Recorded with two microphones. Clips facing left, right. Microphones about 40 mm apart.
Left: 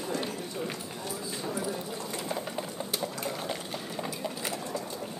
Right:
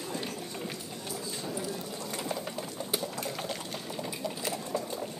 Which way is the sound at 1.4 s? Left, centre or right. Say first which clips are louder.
Left 4 dB; centre.